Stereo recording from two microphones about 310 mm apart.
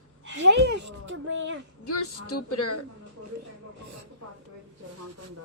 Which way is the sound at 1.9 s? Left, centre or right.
Left.